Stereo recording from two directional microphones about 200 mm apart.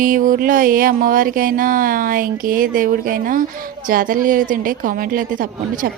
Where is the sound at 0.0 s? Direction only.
45° right (ahead or behind).